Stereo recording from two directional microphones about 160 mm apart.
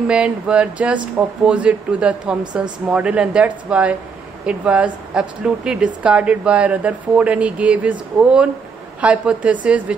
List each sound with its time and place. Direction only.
0.1 s speech: 5° right (ahead or behind)